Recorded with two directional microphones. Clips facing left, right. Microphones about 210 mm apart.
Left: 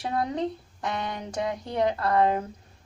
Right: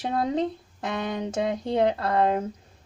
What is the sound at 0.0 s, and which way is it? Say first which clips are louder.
Speech: right 3 dB; 25° right (ahead or behind).